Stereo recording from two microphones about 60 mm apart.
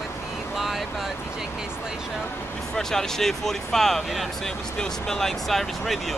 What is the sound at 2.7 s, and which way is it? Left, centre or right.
Speech, centre.